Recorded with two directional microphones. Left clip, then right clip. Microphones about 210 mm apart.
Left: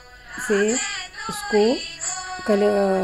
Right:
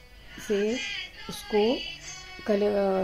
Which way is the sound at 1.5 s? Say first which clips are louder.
Left 6 dB; 55° left (ahead or behind).